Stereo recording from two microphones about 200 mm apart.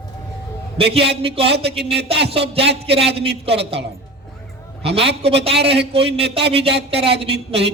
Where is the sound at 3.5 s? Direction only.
30° right (ahead or behind).